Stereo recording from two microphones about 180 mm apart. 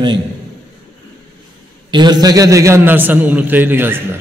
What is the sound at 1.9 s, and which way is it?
A man's voice, 25° right (ahead or behind).